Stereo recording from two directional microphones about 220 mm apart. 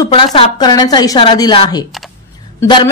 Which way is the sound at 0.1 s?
20° left (ahead or behind).